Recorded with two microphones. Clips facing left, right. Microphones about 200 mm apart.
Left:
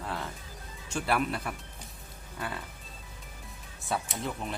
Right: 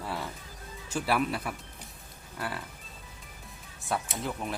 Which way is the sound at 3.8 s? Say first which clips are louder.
Right 1 dB; centre (ahead or behind).